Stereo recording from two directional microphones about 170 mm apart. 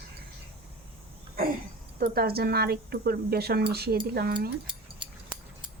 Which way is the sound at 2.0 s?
65° right (ahead or behind).